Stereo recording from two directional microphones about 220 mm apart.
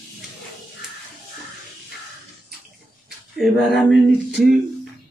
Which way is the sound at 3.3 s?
Centre (ahead or behind).